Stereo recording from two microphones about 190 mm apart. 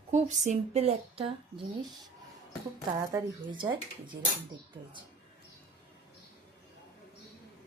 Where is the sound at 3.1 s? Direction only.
20° right (ahead or behind).